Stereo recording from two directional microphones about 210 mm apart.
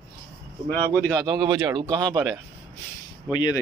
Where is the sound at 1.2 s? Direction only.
20° right (ahead or behind).